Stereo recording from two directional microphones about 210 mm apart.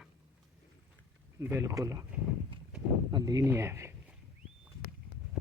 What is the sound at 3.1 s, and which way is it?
Speech, 20° right (ahead or behind).